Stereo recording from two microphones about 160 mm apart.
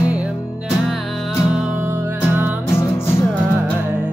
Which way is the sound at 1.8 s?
15° right (ahead or behind).